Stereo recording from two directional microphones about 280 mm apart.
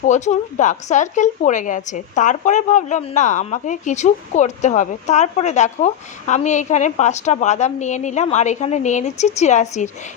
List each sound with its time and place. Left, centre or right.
0.1 s a woman's voice: left